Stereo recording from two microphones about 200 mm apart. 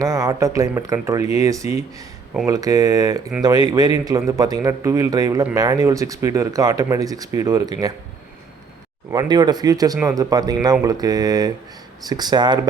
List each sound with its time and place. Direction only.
0.0 s speech: 15° right (ahead or behind)
9.1 s speech: 20° right (ahead or behind)